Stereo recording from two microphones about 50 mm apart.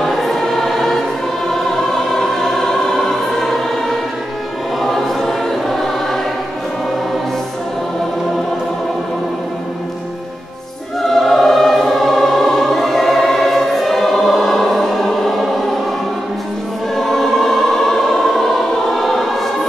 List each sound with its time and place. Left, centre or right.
0.0 s choir: centre
1.5 s music: centre
4.8 s choir: centre
11.1 s choir: centre
16.9 s choir: centre